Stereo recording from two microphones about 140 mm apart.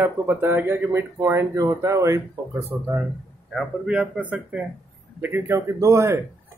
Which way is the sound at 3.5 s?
5° right (ahead or behind).